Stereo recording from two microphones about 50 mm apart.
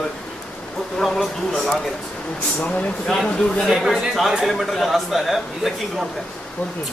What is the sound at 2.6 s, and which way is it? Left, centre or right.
Speech, left.